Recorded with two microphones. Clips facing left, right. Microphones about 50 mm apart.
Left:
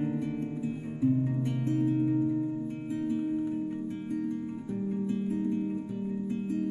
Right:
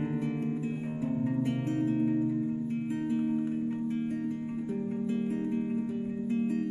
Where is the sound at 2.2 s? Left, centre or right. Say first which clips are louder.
Left 1 dB; centre.